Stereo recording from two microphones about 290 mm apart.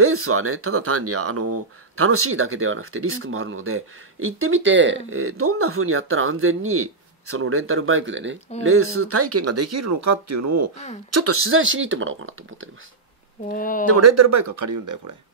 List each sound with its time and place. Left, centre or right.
0.0 s speech: right
13.5 s speech: left
13.8 s speech: right